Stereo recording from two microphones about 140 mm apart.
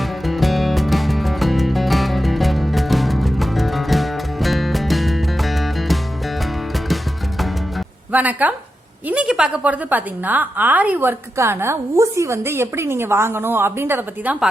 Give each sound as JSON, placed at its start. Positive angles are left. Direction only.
{"t": 0.3, "sound": "music", "side_deg": 0}
{"t": 8.1, "sound": "a woman's voice", "side_deg": -10}